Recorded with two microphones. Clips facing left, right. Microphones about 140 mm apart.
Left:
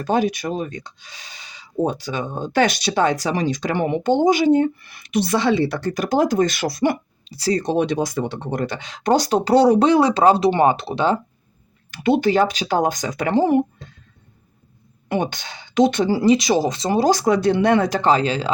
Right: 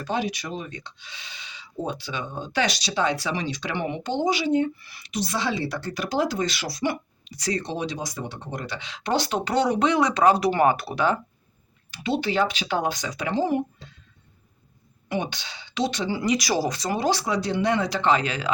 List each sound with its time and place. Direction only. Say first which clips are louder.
0.0 s speech: left 8 dB; 50° left (ahead or behind)
7.3 s speech: left 7 dB; 30° left (ahead or behind)
7.6 s speech: left 10 dB; 55° left (ahead or behind); by 11.2 s 25° left (ahead or behind)
11.9 s speech: left 8 dB; 55° left (ahead or behind)
15.1 s speech: left 6 dB; 50° left (ahead or behind)
16.1 s speech: left 8 dB; 30° left (ahead or behind)
17.0 s speech: left 9 dB; 45° left (ahead or behind)